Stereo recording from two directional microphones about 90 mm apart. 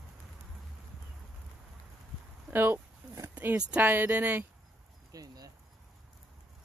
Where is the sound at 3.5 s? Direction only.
20° right (ahead or behind).